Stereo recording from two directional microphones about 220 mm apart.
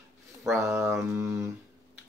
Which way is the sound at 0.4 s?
10° right (ahead or behind).